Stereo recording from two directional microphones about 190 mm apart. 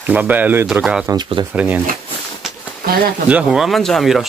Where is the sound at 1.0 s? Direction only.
20° right (ahead or behind).